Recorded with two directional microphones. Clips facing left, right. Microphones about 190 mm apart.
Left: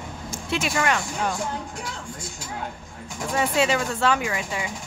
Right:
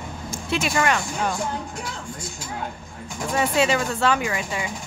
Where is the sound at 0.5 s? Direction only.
35° right (ahead or behind).